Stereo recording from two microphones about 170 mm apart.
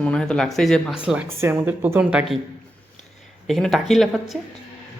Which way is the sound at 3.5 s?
Centre (ahead or behind).